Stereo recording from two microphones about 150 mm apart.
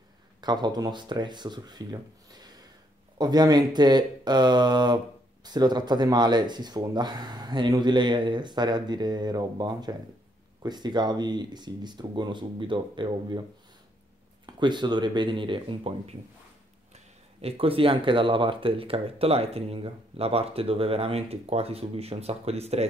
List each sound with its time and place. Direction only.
0.4 s speech: 30° right (ahead or behind)
14.4 s speech: 30° right (ahead or behind)